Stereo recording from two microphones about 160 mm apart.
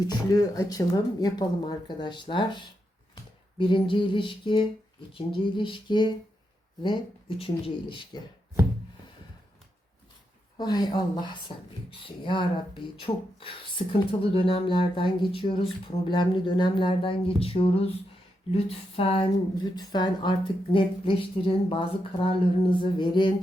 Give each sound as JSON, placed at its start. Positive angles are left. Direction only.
{"t": 0.0, "sound": "speech", "side_deg": 25}
{"t": 3.2, "sound": "a sound", "side_deg": 30}
{"t": 5.1, "sound": "speech", "side_deg": 30}
{"t": 10.6, "sound": "speech", "side_deg": 25}